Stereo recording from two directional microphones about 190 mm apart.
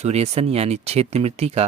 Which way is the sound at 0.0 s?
35° right (ahead or behind).